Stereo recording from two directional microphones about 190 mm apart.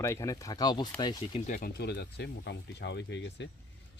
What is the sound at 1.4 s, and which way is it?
Speech, 45° left (ahead or behind).